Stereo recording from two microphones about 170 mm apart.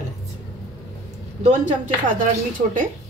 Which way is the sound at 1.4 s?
45° right (ahead or behind).